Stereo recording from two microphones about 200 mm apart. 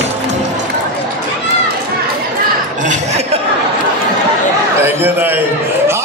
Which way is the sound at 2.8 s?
35° right (ahead or behind).